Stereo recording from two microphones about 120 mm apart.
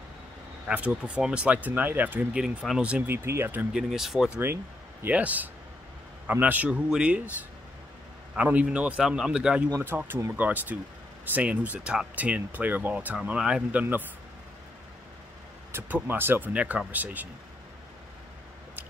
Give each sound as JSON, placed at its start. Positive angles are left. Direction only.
{"t": 0.7, "sound": "speech", "side_deg": -10}
{"t": 3.7, "sound": "speech", "side_deg": -5}
{"t": 8.4, "sound": "speech", "side_deg": -10}
{"t": 15.7, "sound": "speech", "side_deg": -15}